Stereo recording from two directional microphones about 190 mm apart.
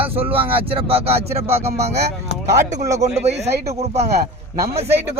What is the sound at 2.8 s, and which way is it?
Speech, 15° right (ahead or behind).